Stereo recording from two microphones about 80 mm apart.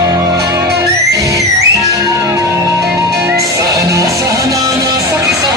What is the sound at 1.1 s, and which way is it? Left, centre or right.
Music, right.